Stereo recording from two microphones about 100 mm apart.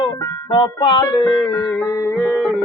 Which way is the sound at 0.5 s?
50° left (ahead or behind).